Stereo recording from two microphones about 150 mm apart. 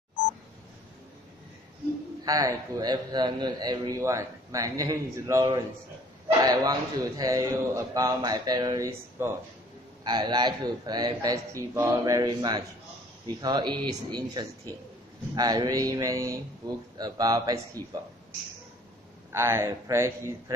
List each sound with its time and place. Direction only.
2.2 s a man's voice: 25° right (ahead or behind)
19.3 s speech: 15° right (ahead or behind)